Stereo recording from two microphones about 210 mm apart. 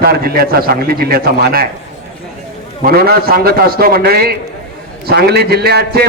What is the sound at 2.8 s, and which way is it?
A man's voice, 45° right (ahead or behind).